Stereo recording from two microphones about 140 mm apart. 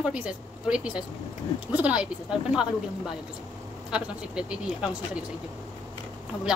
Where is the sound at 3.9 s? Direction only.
5° right (ahead or behind).